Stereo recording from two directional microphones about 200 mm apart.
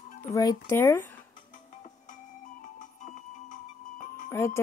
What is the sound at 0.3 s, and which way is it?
Speech, 15° left (ahead or behind).